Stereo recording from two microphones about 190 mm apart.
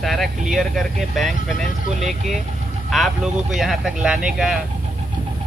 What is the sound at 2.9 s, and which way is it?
Speech, centre (ahead or behind).